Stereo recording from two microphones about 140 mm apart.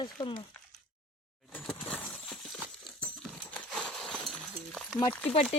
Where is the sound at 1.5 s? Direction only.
Centre (ahead or behind).